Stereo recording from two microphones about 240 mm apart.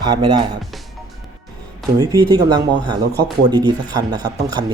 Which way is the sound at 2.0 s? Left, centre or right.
Centre.